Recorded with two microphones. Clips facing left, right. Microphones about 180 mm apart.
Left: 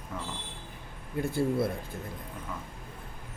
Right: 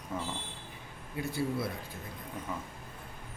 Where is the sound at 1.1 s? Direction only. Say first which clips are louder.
Left 5 dB; 50° left (ahead or behind).